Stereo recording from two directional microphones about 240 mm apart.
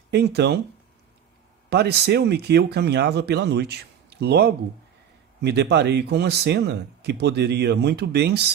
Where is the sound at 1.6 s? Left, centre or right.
Right.